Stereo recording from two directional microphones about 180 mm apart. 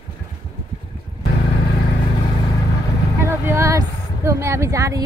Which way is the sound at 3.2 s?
15° right (ahead or behind).